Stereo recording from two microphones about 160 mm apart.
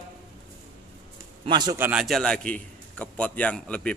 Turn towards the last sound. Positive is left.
turn(degrees=5)  # may be behind; listen again after turning